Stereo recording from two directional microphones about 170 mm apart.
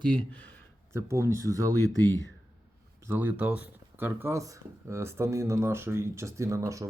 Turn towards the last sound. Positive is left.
turn(degrees=-20)  # may be behind; listen again after turning